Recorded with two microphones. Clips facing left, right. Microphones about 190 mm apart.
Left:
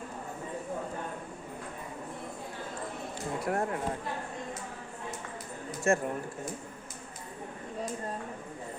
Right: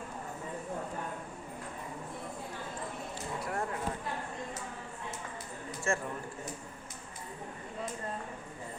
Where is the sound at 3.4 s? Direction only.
50° left (ahead or behind).